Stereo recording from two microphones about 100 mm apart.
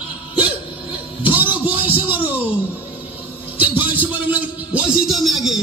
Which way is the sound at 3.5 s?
20° right (ahead or behind).